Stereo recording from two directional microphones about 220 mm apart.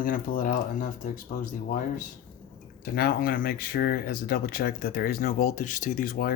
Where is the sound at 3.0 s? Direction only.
45° left (ahead or behind).